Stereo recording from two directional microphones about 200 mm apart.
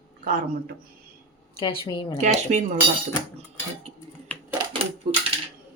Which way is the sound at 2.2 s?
35° right (ahead or behind).